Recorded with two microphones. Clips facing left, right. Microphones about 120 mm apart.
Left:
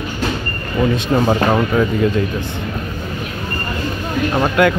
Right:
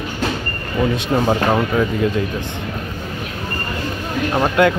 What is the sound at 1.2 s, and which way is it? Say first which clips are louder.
Speech: left 1 dB; centre (ahead or behind).